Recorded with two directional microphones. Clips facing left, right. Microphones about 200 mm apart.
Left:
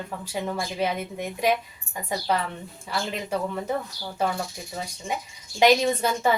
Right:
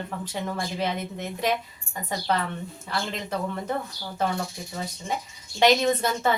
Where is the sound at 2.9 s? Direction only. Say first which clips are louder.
Left 1 dB; 10° left (ahead or behind).